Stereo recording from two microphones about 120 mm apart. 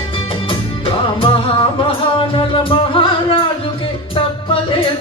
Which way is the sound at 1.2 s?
45° left (ahead or behind).